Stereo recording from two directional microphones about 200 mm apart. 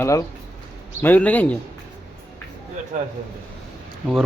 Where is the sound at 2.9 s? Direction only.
40° right (ahead or behind).